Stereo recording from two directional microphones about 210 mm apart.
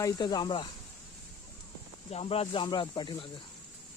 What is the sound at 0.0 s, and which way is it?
Speech, 20° left (ahead or behind).